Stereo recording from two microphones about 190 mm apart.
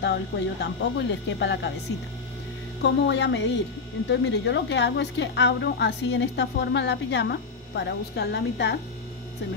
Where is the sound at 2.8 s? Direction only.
65° left (ahead or behind).